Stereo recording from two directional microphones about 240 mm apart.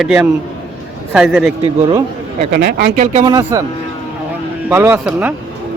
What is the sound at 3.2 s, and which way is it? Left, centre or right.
Speech, centre.